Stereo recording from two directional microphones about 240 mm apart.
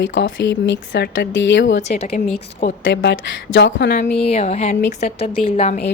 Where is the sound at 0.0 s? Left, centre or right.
Left.